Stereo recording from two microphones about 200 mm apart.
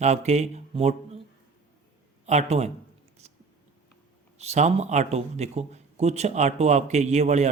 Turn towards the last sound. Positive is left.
turn(degrees=-35)  # may be behind; listen again after turning